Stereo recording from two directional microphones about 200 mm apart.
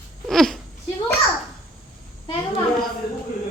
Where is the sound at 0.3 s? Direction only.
Centre (ahead or behind).